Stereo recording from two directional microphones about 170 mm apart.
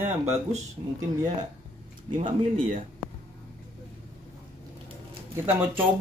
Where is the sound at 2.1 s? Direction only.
45° right (ahead or behind).